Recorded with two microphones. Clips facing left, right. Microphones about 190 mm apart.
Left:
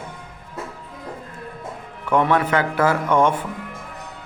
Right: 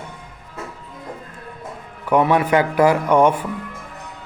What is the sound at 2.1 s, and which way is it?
Speech, 10° right (ahead or behind).